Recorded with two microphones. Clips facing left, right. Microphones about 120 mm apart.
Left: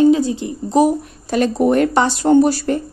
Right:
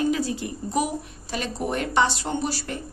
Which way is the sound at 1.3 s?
55° left (ahead or behind).